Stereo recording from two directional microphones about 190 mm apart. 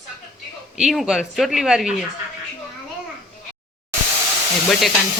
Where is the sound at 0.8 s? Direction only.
Centre (ahead or behind).